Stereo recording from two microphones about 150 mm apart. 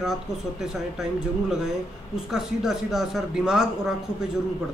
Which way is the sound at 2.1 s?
5° right (ahead or behind).